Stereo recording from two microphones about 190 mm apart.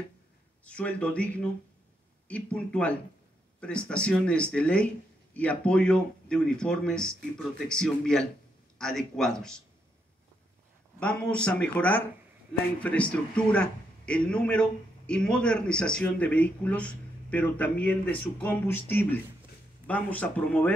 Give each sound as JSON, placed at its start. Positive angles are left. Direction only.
{"t": 0.7, "sound": "a man's voice", "side_deg": 5}
{"t": 11.0, "sound": "a man's voice", "side_deg": 5}